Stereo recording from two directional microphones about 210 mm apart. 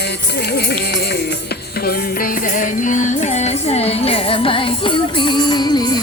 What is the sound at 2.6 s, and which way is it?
Music, 35° left (ahead or behind).